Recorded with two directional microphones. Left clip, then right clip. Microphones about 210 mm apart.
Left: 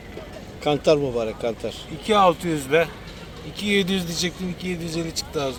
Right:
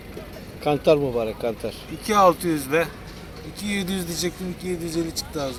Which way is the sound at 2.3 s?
35° left (ahead or behind).